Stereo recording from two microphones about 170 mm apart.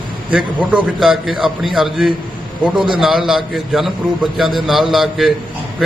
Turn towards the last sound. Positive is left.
turn(degrees=0)  # may be behind; listen again after turning